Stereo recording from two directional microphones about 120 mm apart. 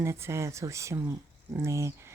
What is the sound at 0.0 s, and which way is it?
Speech, 25° right (ahead or behind).